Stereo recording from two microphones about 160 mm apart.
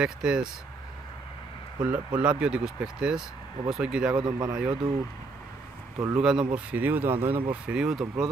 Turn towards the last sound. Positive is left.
turn(degrees=-5)  # may be behind; listen again after turning